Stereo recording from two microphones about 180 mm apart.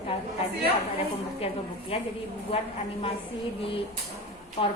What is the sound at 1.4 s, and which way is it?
Speech, 35° left (ahead or behind).